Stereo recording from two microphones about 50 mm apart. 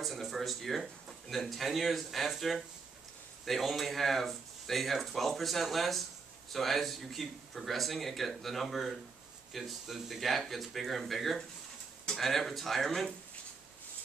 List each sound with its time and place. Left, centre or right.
0.0 s speech: centre